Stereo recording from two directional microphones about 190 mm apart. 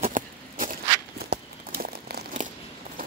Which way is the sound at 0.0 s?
45° right (ahead or behind).